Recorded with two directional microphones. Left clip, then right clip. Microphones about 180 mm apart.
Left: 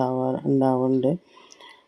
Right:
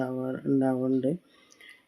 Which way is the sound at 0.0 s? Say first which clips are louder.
Left 8 dB; 20° left (ahead or behind).